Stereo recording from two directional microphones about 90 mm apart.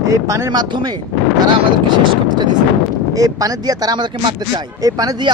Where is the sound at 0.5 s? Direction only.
55° right (ahead or behind).